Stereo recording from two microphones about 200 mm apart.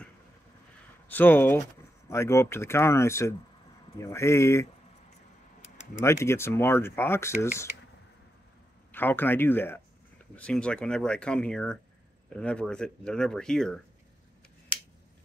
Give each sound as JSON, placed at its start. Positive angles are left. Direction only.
{"t": 1.0, "sound": "speech", "side_deg": 10}
{"t": 5.9, "sound": "speech", "side_deg": 15}
{"t": 8.9, "sound": "speech", "side_deg": 10}
{"t": 14.7, "sound": "a sound", "side_deg": 5}